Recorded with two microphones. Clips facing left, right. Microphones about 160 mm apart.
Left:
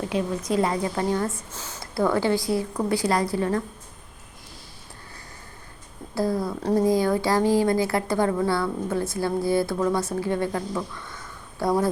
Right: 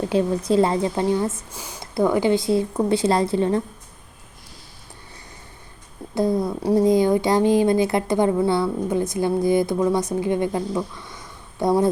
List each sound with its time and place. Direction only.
0.1 s a woman's voice: 30° right (ahead or behind)
6.1 s a woman's voice: 20° right (ahead or behind)
6.6 s speech: 10° right (ahead or behind)
6.8 s a woman's voice: 20° right (ahead or behind)